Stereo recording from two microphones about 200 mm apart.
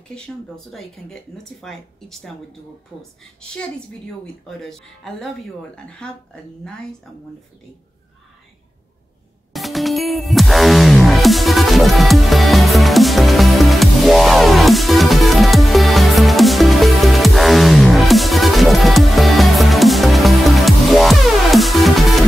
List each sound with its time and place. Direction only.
0.7 s speech: centre (ahead or behind)
4.5 s speech: centre (ahead or behind)
9.5 s music: centre (ahead or behind)